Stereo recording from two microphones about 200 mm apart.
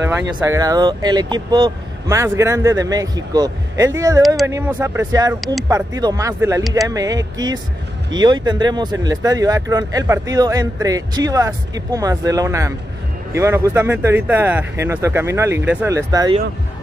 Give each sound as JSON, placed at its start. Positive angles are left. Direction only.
{"t": 0.5, "sound": "speech", "side_deg": -20}
{"t": 5.4, "sound": "speech", "side_deg": 0}
{"t": 5.7, "sound": "speech", "side_deg": -20}